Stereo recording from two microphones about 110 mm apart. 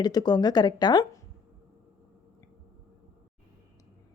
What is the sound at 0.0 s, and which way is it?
A woman's voice, 40° left (ahead or behind).